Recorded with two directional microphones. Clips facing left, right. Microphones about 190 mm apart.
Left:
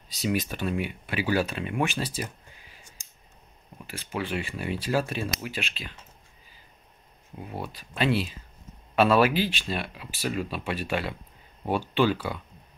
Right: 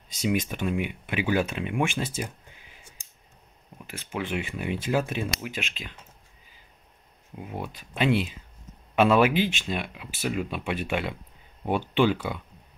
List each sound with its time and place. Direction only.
0.3 s speech: 15° right (ahead or behind)
3.7 s speech: 10° right (ahead or behind)
7.3 s speech: 10° right (ahead or behind)